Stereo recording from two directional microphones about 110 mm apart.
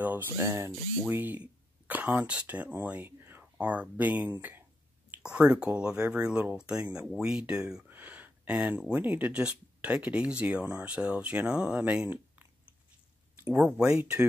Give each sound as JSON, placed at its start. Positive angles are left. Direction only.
{"t": 0.0, "sound": "speech", "side_deg": -20}
{"t": 13.6, "sound": "speech", "side_deg": -5}